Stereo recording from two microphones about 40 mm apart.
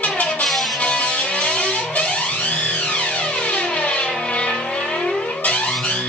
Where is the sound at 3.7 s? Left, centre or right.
Left.